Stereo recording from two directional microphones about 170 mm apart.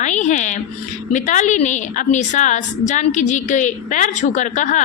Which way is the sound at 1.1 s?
45° left (ahead or behind).